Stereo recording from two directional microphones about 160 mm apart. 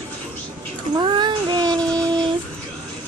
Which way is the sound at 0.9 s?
30° right (ahead or behind).